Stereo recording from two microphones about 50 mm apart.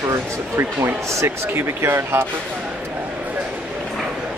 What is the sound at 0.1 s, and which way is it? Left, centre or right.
Speech, right.